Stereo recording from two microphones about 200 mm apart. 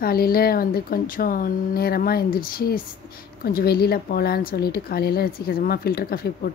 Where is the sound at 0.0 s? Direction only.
50° left (ahead or behind).